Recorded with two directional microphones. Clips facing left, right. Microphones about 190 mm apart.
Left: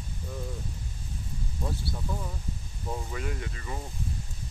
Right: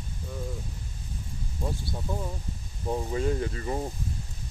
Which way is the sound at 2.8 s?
30° right (ahead or behind).